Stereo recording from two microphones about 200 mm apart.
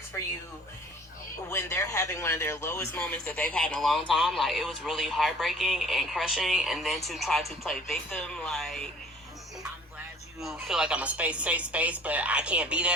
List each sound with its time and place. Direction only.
0.1 s speech: 15° left (ahead or behind)
1.5 s speech: 15° left (ahead or behind)
10.4 s a woman's voice: 5° right (ahead or behind)